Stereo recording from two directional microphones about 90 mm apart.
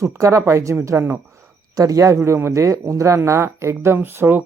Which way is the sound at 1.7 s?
40° right (ahead or behind).